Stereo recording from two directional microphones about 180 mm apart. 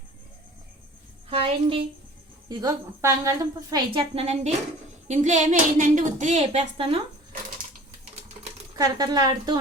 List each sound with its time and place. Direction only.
1.3 s speech: 30° right (ahead or behind)
2.5 s a woman's voice: 20° right (ahead or behind)
8.7 s a woman's voice: 20° right (ahead or behind)